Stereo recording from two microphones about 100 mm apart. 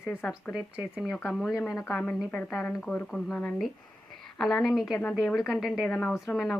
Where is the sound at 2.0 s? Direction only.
15° left (ahead or behind).